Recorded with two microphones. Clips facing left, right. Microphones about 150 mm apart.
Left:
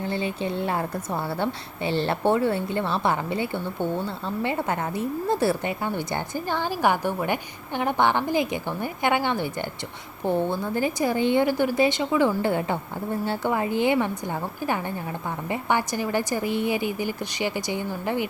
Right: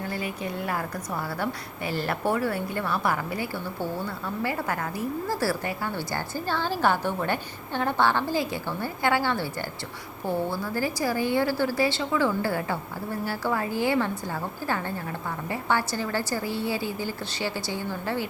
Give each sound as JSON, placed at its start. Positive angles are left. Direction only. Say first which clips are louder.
{"t": 0.0, "sound": "a woman's voice", "louder": "left 4 dB", "side_deg": 25}